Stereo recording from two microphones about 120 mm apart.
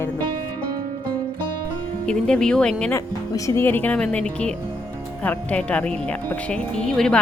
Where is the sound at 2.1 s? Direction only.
5° left (ahead or behind).